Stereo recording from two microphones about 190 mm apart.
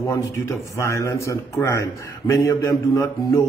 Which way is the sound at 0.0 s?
15° left (ahead or behind).